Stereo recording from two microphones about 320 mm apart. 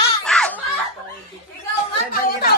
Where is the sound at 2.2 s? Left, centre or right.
Left.